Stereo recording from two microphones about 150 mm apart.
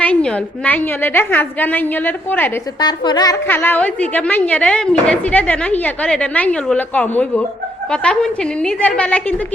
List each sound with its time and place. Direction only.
0.0 s a woman's voice: 10° left (ahead or behind)
2.8 s a woman's voice: 30° left (ahead or behind)
3.4 s a woman's voice: 15° left (ahead or behind)